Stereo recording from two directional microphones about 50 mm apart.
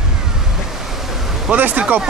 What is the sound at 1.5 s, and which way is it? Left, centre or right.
Speech, right.